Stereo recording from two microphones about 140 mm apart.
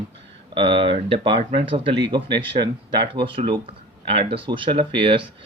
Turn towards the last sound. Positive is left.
turn(degrees=-35)  # may be behind; listen again after turning